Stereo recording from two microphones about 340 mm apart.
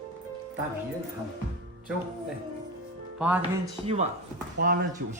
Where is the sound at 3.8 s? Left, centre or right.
Centre.